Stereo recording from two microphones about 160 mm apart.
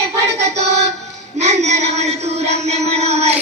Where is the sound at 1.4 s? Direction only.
45° right (ahead or behind).